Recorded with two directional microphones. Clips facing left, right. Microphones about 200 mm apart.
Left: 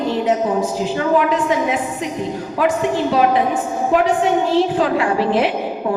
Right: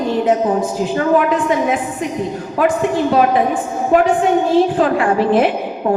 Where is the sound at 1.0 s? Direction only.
50° right (ahead or behind).